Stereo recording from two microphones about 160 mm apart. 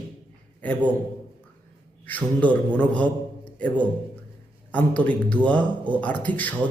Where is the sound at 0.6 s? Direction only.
10° left (ahead or behind).